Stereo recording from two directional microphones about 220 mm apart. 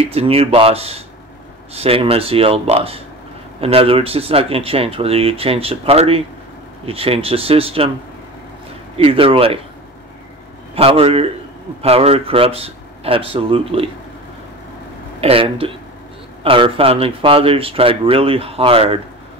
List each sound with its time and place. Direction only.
0.1 s speech: 25° right (ahead or behind)
8.9 s speech: 25° right (ahead or behind)
10.7 s a man's voice: 25° right (ahead or behind)
15.1 s speech: 25° right (ahead or behind)